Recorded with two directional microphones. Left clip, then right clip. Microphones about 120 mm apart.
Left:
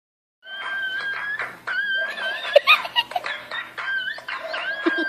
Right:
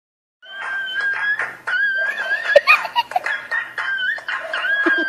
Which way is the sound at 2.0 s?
65° left (ahead or behind).